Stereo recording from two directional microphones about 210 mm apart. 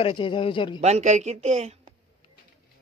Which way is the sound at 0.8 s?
30° right (ahead or behind).